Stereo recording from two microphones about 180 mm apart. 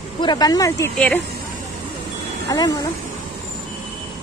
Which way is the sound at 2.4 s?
20° left (ahead or behind).